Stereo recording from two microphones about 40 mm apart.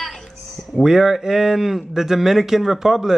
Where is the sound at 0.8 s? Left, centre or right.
Centre.